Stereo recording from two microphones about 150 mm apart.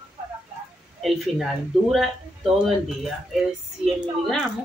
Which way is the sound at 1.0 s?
Centre (ahead or behind).